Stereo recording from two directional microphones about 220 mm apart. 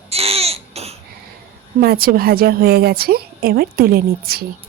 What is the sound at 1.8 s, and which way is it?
A woman's voice, 45° right (ahead or behind).